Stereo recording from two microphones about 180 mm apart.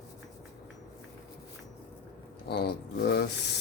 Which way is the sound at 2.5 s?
70° left (ahead or behind).